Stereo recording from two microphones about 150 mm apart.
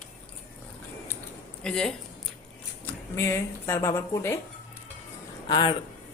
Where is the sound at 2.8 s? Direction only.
15° left (ahead or behind).